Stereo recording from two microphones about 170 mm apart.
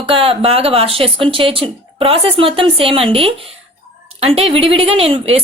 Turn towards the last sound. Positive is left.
turn(degrees=-35)  # may be behind; listen again after turning